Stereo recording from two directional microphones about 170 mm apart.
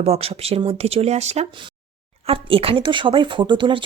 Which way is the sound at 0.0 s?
35° right (ahead or behind).